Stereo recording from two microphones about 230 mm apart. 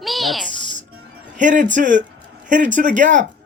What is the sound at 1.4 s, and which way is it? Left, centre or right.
Speech, right.